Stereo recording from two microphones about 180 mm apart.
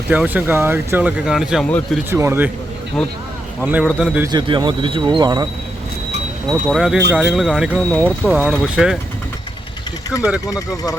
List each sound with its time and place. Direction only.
0.1 s speech: 10° right (ahead or behind)
2.0 s speech: 15° right (ahead or behind)
3.6 s speech: 10° right (ahead or behind)
4.3 s speech: 25° right (ahead or behind)
6.5 s speech: 5° right (ahead or behind)